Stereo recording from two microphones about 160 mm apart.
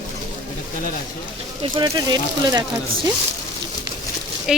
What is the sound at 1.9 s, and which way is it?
Speech, 25° right (ahead or behind).